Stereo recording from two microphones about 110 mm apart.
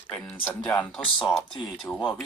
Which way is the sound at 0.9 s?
Centre (ahead or behind).